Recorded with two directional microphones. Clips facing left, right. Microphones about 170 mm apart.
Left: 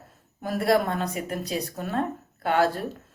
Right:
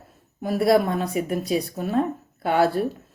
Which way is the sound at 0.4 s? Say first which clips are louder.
Right 4 dB; 10° right (ahead or behind).